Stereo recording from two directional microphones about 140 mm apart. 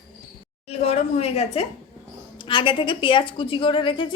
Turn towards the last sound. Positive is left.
turn(degrees=35)  # may be behind; listen again after turning